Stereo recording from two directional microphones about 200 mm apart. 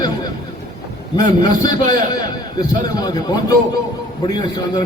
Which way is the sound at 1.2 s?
20° left (ahead or behind).